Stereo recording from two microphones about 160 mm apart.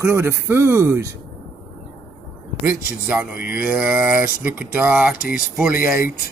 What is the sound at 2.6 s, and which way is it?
Speech, 10° right (ahead or behind).